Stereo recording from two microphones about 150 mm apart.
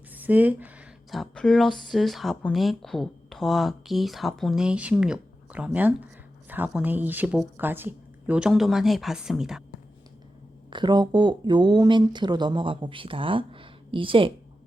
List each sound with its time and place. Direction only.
0.1 s a sound: 10° right (ahead or behind)
1.1 s speech: centre (ahead or behind)
10.7 s speech: 30° right (ahead or behind)